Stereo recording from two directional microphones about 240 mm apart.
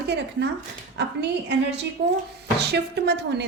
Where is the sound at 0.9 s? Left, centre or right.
Right.